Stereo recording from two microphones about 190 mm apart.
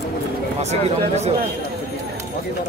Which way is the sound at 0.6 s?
35° right (ahead or behind).